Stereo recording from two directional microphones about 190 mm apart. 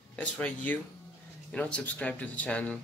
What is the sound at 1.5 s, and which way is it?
Speech, 5° left (ahead or behind).